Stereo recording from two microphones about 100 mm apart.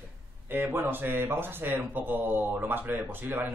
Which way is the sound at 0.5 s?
20° right (ahead or behind).